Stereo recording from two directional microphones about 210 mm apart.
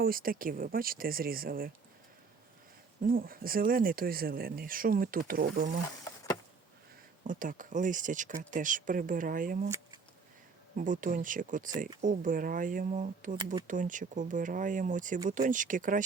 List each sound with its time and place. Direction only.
0.0 s speech: 45° right (ahead or behind)
3.1 s speech: 45° right (ahead or behind)
7.3 s speech: 40° right (ahead or behind)
9.6 s a sound: 15° right (ahead or behind)
10.8 s speech: 40° right (ahead or behind)